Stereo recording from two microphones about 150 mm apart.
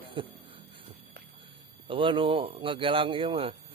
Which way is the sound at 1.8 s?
35° right (ahead or behind).